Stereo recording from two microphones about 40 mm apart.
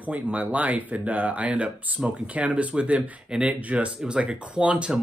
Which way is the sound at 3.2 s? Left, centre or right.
Right.